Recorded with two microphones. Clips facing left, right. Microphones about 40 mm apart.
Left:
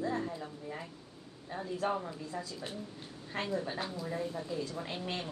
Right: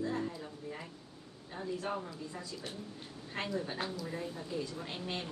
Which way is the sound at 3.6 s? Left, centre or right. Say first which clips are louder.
Left 1 dB; centre.